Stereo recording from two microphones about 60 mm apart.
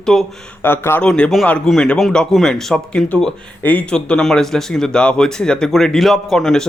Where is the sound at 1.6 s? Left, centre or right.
Centre.